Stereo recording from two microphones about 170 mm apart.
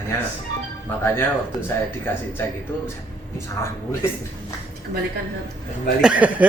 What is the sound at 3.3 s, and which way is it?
Speech, 15° left (ahead or behind).